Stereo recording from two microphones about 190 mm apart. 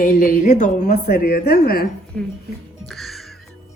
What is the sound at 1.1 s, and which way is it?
Speech, 50° left (ahead or behind).